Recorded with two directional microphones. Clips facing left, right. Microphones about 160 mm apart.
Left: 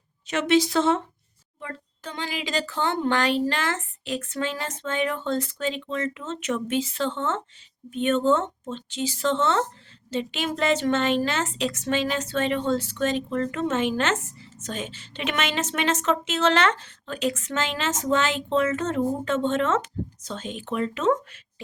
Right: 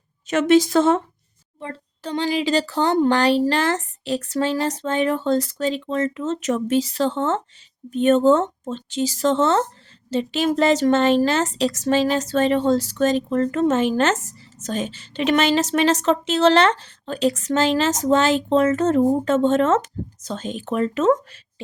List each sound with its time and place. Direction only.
0.3 s a woman's voice: 45° right (ahead or behind)
1.5 s a woman's voice: 30° right (ahead or behind)